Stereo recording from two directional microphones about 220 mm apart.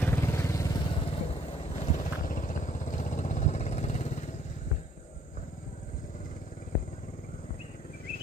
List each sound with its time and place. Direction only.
0.0 s vehicle: 15° left (ahead or behind); by 4.2 s 30° left (ahead or behind)